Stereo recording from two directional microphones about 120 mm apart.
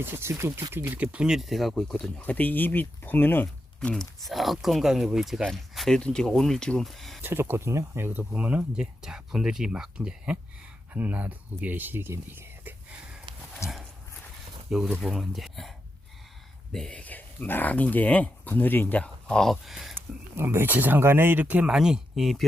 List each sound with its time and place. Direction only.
0.0 s speech: 20° right (ahead or behind); by 7.2 s centre (ahead or behind)
7.2 s speech: 20° right (ahead or behind)
13.6 s dog: 25° left (ahead or behind)
14.7 s speech: 5° right (ahead or behind)
16.7 s speech: 5° left (ahead or behind)
20.3 s speech: 20° right (ahead or behind); by 22.4 s centre (ahead or behind)